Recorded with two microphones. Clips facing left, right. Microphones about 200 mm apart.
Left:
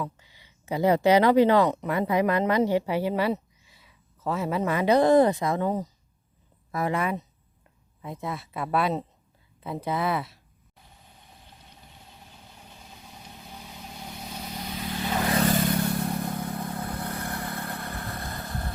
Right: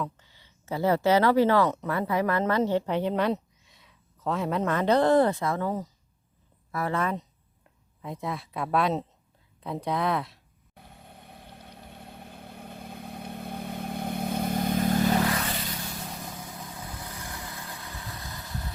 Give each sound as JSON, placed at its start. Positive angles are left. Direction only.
{"t": 0.0, "sound": "speech", "side_deg": 10}
{"t": 10.8, "sound": "vehicle", "side_deg": -60}
{"t": 15.3, "sound": "vehicle", "side_deg": 40}